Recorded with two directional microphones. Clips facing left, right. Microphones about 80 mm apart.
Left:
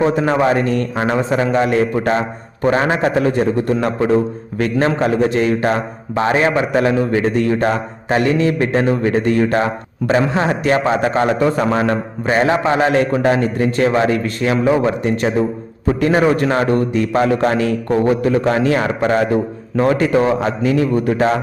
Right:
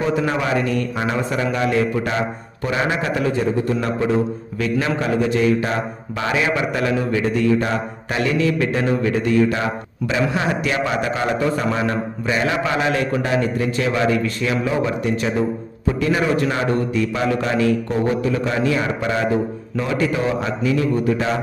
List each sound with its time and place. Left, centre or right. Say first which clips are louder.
0.0 s a man's voice: left 6 dB; left